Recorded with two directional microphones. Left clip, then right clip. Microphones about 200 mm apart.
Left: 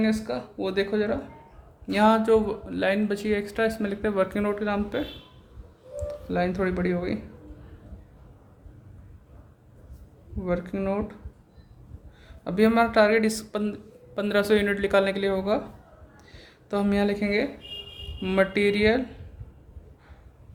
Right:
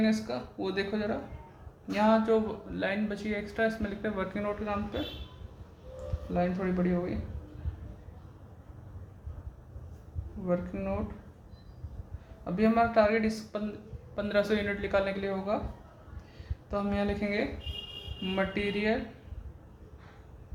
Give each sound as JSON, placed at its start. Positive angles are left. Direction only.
{"t": 0.0, "sound": "speech", "side_deg": 35}
{"t": 6.3, "sound": "speech", "side_deg": 50}
{"t": 10.4, "sound": "speech", "side_deg": 55}
{"t": 12.5, "sound": "speech", "side_deg": 50}
{"t": 16.6, "sound": "speech", "side_deg": 45}
{"t": 18.2, "sound": "speech", "side_deg": 50}